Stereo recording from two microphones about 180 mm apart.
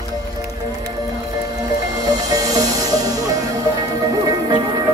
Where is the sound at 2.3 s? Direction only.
20° right (ahead or behind).